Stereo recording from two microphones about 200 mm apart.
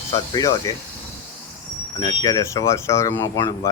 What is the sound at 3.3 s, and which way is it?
Speech, 20° left (ahead or behind).